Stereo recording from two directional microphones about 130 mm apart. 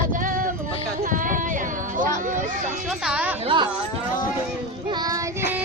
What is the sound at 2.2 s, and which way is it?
Music, 80° right.